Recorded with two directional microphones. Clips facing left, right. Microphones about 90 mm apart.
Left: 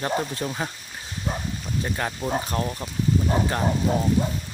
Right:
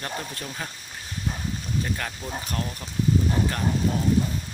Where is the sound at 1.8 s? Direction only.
25° left (ahead or behind).